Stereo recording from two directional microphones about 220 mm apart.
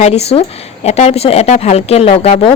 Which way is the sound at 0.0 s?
30° left (ahead or behind).